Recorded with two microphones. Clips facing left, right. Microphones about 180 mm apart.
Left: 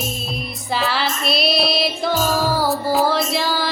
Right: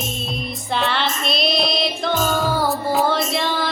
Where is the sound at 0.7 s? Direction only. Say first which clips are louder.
Even; 5° left (ahead or behind).